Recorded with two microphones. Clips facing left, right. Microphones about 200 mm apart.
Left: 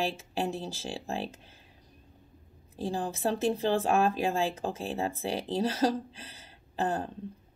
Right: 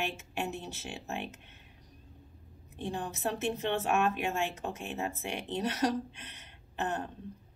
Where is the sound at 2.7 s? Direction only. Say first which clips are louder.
Left 4 dB; 35° left (ahead or behind).